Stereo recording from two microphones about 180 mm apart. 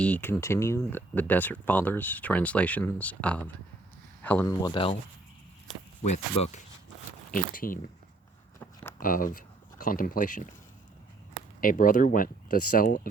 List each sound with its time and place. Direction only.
0.0 s speech: 10° left (ahead or behind)
4.6 s speech: 30° left (ahead or behind)
6.0 s speech: 40° left (ahead or behind)
8.5 s a sound: 15° left (ahead or behind)
9.0 s speech: 50° left (ahead or behind)
11.6 s speech: 50° left (ahead or behind)